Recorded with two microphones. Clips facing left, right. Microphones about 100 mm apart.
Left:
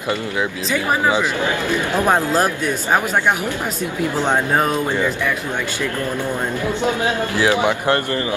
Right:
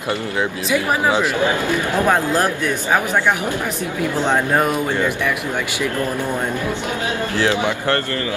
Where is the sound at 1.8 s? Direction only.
15° left (ahead or behind).